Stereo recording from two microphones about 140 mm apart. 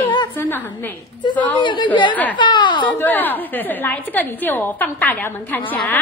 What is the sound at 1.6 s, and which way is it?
Speech, 35° left (ahead or behind).